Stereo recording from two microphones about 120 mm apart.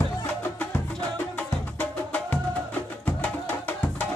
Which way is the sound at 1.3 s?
15° left (ahead or behind).